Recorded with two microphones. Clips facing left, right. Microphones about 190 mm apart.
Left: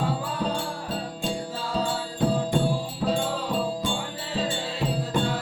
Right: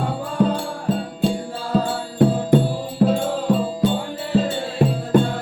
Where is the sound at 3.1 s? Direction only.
45° right (ahead or behind).